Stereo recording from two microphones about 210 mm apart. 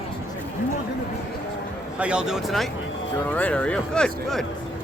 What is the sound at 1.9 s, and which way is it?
Speech, 5° right (ahead or behind).